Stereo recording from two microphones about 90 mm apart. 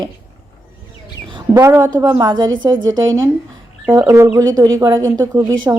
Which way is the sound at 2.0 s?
35° right (ahead or behind).